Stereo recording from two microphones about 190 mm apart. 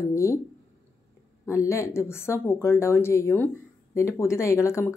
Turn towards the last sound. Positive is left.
turn(degrees=15)  # may be behind; listen again after turning